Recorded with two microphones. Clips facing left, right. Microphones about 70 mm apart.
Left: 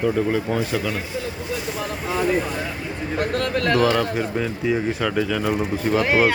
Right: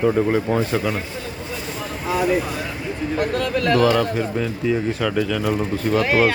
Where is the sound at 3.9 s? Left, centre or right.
Centre.